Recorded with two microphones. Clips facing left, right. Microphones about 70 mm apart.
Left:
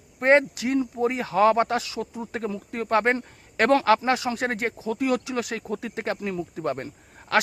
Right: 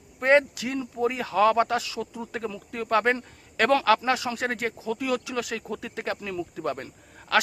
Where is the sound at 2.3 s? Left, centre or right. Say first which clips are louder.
Left 4 dB; left.